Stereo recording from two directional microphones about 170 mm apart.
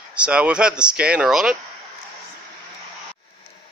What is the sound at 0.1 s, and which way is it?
Speech, 5° right (ahead or behind).